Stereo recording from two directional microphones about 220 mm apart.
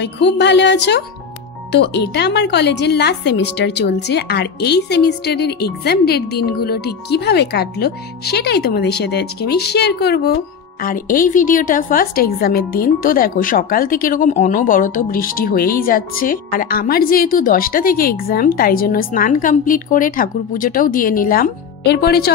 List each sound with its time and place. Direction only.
0.0 s a woman's voice: 50° left (ahead or behind)